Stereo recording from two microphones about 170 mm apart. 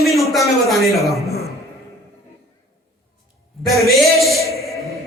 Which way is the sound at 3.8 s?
Centre (ahead or behind).